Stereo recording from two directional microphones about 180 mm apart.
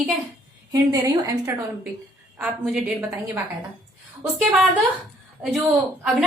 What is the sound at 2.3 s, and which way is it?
Speech, 10° right (ahead or behind).